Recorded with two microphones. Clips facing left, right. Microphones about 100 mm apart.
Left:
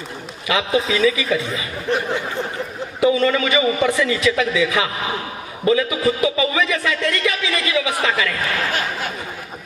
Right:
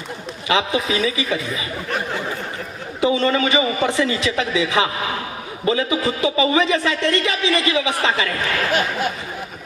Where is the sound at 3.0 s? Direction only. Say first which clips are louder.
Left 1 dB; 30° right (ahead or behind).